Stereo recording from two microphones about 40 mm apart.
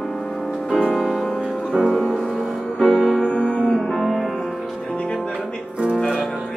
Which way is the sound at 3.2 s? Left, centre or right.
Left.